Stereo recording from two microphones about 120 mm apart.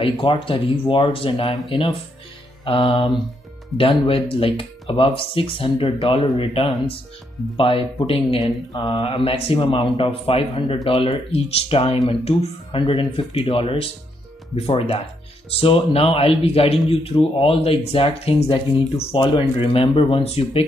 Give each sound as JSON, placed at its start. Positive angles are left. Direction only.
{"t": 0.0, "sound": "speech", "side_deg": 45}